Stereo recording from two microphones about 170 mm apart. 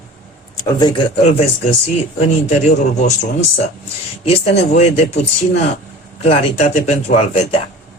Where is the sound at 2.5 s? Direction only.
45° left (ahead or behind).